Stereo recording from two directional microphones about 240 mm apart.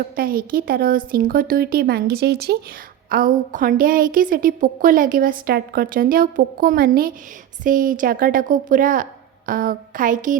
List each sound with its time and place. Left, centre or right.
0.2 s a woman's voice: right